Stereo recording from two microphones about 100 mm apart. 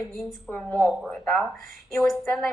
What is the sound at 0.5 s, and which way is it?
Speech, 10° left (ahead or behind).